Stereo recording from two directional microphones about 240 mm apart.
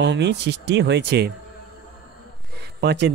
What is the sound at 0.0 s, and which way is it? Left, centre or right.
Speech, right.